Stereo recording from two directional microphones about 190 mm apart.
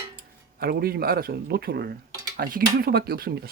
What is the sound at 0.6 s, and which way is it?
Speech, 55° right (ahead or behind).